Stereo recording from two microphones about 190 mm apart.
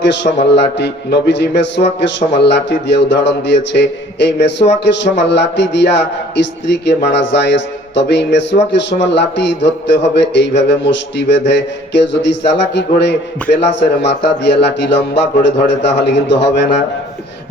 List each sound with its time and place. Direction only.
0.0 s mantra: 70° left (ahead or behind)
0.3 s a man's voice: 35° left (ahead or behind)
0.8 s mantra: 65° left (ahead or behind)